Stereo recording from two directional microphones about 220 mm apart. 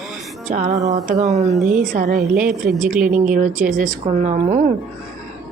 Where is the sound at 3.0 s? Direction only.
35° right (ahead or behind).